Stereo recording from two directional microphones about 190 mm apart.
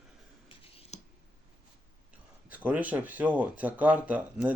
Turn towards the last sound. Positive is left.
turn(degrees=-5)  # may be behind; listen again after turning